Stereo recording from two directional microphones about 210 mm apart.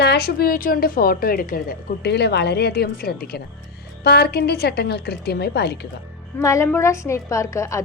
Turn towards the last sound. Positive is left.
turn(degrees=15)  # may be behind; listen again after turning